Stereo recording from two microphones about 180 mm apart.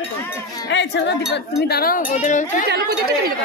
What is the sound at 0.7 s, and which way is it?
Speech, 80° left.